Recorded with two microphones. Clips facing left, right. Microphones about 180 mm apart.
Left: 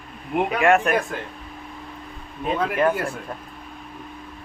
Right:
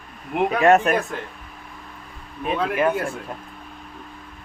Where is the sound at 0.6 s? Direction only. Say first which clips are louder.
Right 3 dB; 40° right (ahead or behind).